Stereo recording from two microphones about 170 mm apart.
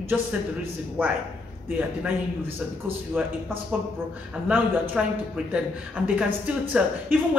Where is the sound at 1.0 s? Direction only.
10° right (ahead or behind).